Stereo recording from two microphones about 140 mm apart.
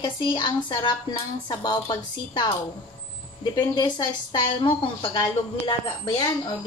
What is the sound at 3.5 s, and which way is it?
A woman's voice, 30° left (ahead or behind).